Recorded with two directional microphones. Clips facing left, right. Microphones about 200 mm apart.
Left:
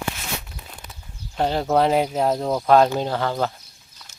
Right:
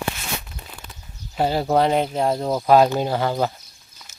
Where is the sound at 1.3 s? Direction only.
5° right (ahead or behind).